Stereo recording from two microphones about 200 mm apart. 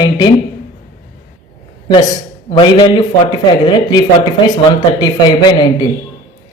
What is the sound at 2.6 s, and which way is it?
Speech, 25° left (ahead or behind).